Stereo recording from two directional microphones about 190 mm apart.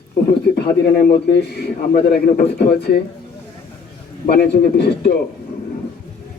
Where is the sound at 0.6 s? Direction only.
55° left (ahead or behind).